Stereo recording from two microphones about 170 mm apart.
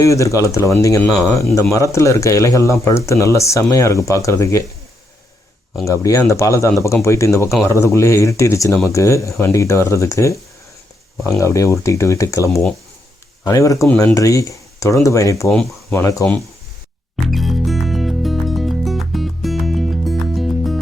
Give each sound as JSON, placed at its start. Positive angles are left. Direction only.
{"t": 0.0, "sound": "speech", "side_deg": 20}
{"t": 5.8, "sound": "speech", "side_deg": 20}
{"t": 15.4, "sound": "speech", "side_deg": 5}
{"t": 16.0, "sound": "speech", "side_deg": 20}
{"t": 17.2, "sound": "music", "side_deg": 0}